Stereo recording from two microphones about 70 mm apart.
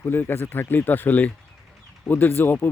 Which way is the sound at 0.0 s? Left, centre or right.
Left.